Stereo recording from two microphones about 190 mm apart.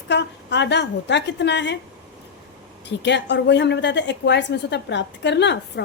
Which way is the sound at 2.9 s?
65° left (ahead or behind).